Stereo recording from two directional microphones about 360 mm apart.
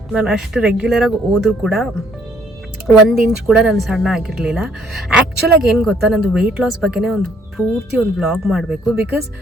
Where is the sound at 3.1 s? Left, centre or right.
Centre.